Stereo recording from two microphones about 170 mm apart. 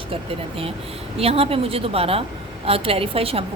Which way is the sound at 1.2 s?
35° right (ahead or behind).